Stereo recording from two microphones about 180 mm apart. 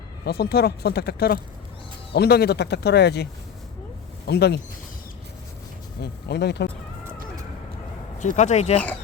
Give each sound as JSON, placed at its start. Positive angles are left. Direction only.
{"t": 0.3, "sound": "speech", "side_deg": 60}
{"t": 4.3, "sound": "speech", "side_deg": 65}
{"t": 6.0, "sound": "speech", "side_deg": 65}
{"t": 8.2, "sound": "speech", "side_deg": 40}